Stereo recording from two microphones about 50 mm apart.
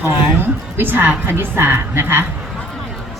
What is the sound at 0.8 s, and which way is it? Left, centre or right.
A woman's voice, right.